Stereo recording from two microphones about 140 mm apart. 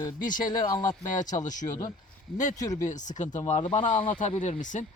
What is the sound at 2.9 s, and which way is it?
Speech, 60° left (ahead or behind).